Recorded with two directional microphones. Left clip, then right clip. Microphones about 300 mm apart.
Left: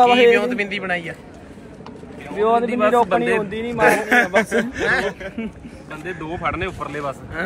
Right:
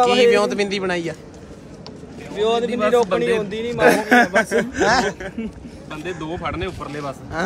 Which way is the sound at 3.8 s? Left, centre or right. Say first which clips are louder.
Right 1 dB; right.